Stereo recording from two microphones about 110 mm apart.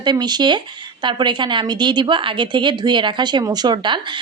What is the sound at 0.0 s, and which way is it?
Speech, 40° right (ahead or behind).